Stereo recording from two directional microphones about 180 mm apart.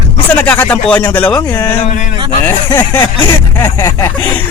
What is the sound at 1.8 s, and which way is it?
Speech, 40° left (ahead or behind).